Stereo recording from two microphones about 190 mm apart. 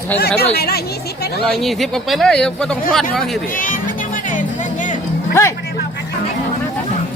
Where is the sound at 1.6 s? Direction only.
Centre (ahead or behind).